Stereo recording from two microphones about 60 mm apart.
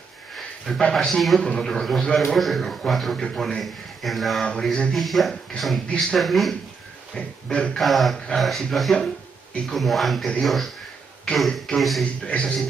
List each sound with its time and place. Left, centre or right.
0.4 s a sound: centre
0.9 s a man's voice: centre
4.5 s speech: centre
4.9 s a man's voice: centre
7.2 s speech: centre
7.8 s a man's voice: centre
12.0 s speech: centre